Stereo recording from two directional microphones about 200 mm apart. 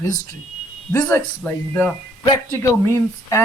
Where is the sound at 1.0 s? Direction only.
10° left (ahead or behind).